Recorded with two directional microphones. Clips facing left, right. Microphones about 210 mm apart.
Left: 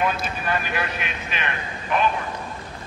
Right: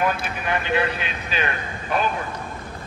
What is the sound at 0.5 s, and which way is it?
A man's voice, 25° right (ahead or behind).